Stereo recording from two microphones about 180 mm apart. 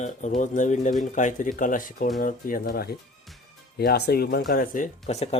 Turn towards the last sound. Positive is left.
turn(degrees=40)  # may be behind; listen again after turning